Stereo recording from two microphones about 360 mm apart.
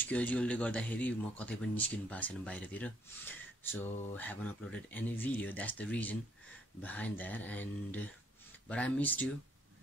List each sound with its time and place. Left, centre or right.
0.0 s speech: centre